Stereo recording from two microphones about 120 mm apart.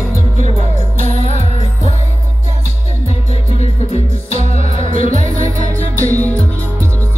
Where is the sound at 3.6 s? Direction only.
60° left (ahead or behind).